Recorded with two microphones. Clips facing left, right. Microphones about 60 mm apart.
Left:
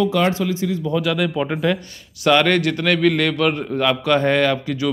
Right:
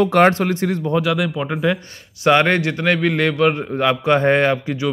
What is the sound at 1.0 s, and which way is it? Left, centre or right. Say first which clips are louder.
Speech: even; centre.